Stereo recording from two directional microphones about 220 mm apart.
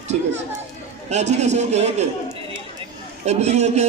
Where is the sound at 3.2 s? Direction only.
30° right (ahead or behind).